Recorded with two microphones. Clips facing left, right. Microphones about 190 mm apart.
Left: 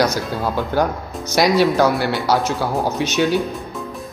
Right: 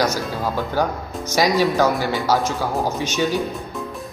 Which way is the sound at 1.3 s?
10° left (ahead or behind).